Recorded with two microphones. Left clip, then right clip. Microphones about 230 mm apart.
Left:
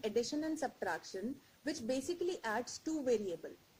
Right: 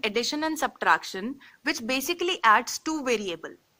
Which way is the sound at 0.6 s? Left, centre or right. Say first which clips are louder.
Right 16 dB; right.